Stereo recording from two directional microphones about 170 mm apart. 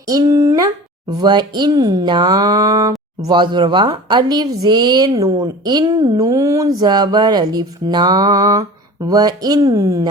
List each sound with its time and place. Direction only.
0.1 s a woman's voice: 20° right (ahead or behind)